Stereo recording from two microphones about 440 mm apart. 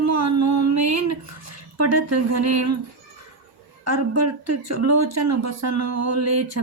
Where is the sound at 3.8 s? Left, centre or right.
Right.